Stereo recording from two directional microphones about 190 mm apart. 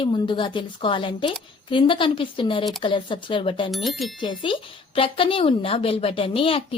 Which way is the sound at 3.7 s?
Centre (ahead or behind).